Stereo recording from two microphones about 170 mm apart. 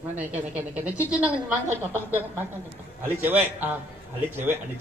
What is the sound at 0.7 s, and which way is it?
Speech, 10° right (ahead or behind).